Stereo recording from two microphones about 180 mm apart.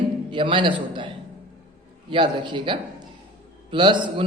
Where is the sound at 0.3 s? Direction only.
25° right (ahead or behind).